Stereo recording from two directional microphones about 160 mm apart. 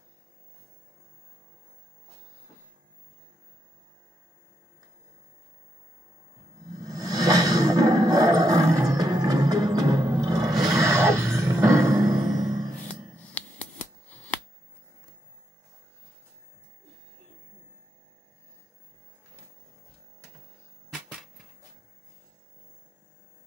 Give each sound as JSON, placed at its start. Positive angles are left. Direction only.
{"t": 6.8, "sound": "music", "side_deg": -20}
{"t": 13.3, "sound": "shuffling cards", "side_deg": 10}
{"t": 20.9, "sound": "a sound", "side_deg": 0}